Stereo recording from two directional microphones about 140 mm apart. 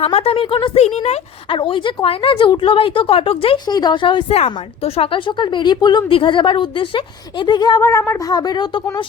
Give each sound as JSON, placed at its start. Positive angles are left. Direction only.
{"t": 0.0, "sound": "speech", "side_deg": 45}
{"t": 1.5, "sound": "speech", "side_deg": 35}
{"t": 3.7, "sound": "speech", "side_deg": 30}
{"t": 4.4, "sound": "speech", "side_deg": 45}